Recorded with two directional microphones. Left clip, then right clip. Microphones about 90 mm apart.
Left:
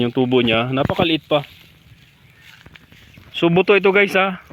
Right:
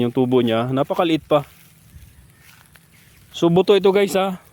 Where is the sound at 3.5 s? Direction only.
45° right (ahead or behind).